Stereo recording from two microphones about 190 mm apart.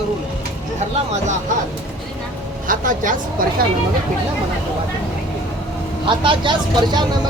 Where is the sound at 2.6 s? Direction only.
45° right (ahead or behind).